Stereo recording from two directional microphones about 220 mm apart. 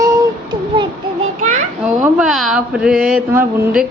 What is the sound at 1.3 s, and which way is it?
Children playing, 35° right (ahead or behind).